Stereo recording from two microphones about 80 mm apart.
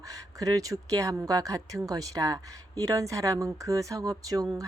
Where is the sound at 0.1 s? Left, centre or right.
Right.